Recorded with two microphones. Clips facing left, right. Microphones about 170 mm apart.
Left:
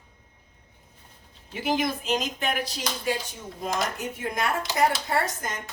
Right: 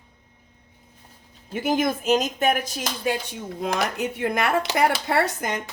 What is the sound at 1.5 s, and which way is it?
Speech, 50° right (ahead or behind).